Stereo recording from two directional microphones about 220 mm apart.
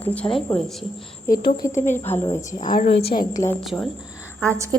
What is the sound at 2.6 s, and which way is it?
Speech, 35° left (ahead or behind).